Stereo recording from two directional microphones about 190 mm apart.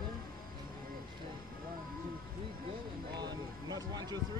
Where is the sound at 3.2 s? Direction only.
20° right (ahead or behind).